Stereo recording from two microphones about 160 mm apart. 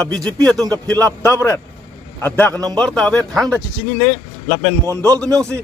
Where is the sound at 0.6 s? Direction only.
20° right (ahead or behind).